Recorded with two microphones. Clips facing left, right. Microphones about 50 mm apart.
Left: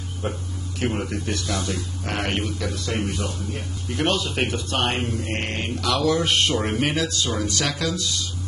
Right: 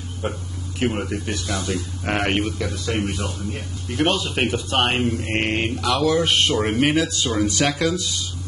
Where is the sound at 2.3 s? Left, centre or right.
Centre.